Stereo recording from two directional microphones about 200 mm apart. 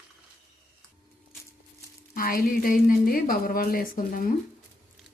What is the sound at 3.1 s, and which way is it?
Speech, 45° left (ahead or behind).